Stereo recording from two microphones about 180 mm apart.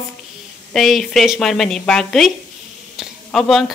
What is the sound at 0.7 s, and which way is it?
Speech, centre (ahead or behind).